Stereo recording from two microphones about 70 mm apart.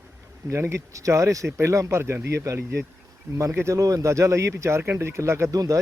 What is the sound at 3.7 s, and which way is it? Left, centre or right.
Speech, right.